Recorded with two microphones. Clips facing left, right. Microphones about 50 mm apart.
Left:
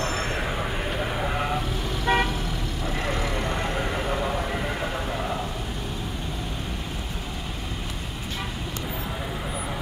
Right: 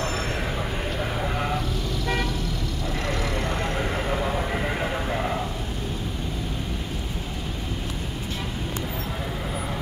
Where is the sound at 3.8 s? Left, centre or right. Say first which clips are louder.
Right 1 dB; centre.